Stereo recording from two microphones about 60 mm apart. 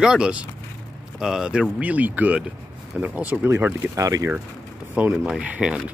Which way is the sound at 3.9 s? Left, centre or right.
Right.